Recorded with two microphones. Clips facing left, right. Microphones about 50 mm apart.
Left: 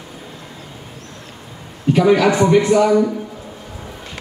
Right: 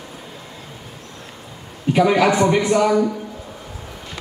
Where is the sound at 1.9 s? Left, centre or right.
Centre.